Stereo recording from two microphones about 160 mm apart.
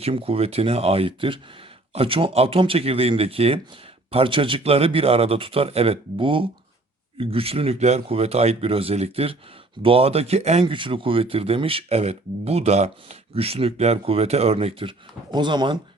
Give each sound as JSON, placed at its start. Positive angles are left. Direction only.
{"t": 0.0, "sound": "speech", "side_deg": -35}